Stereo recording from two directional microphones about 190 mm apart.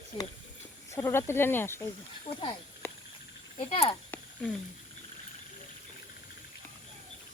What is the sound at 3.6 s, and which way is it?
Speech, 30° left (ahead or behind).